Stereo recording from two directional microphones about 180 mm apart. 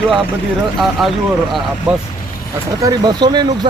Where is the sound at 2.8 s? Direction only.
20° right (ahead or behind).